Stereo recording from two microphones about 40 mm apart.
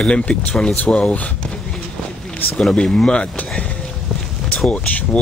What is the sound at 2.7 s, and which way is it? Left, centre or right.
Speech, left.